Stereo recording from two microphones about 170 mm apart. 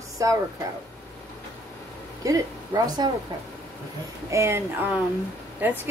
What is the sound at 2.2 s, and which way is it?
Speech, 20° right (ahead or behind).